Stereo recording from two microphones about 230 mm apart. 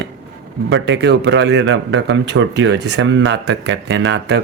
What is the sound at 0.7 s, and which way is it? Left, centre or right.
Speech, right.